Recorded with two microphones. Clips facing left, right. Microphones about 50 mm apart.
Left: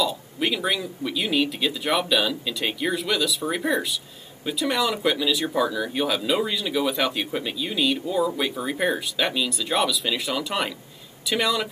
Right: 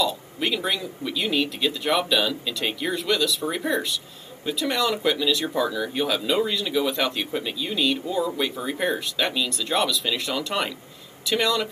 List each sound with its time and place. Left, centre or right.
0.0 s speech: centre